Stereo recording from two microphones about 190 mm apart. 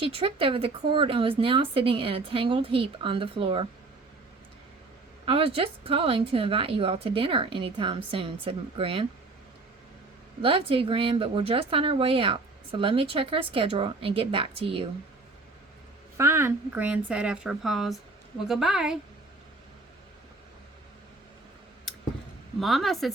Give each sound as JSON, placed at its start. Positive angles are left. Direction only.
{"t": 0.0, "sound": "speech", "side_deg": -30}
{"t": 5.2, "sound": "speech", "side_deg": -30}
{"t": 10.4, "sound": "speech", "side_deg": -30}
{"t": 16.1, "sound": "speech", "side_deg": -15}
{"t": 22.6, "sound": "speech", "side_deg": 0}